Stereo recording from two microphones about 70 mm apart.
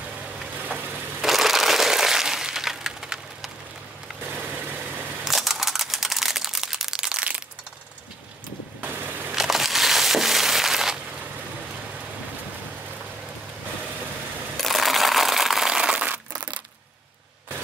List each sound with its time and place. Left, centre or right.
0.6 s vehicle: right
1.2 s crushing: centre
4.3 s vehicle: right
5.2 s a sound: centre
8.8 s a sound: right
9.3 s crushing: centre
14.6 s crumpling: centre